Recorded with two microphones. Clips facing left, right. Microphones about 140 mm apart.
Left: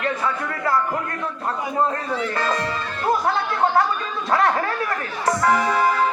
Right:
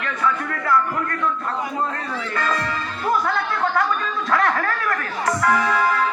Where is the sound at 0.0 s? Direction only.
35° left (ahead or behind).